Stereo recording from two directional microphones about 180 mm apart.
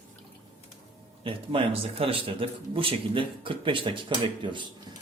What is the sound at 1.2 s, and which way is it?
Speech, 30° right (ahead or behind).